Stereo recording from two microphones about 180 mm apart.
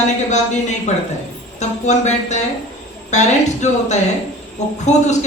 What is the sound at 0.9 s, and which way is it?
Speech, 40° left (ahead or behind).